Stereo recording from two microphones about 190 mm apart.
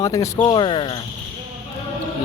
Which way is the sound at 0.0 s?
20° left (ahead or behind).